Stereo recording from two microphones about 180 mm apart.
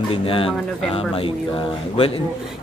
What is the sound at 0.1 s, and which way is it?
Speech, 30° left (ahead or behind).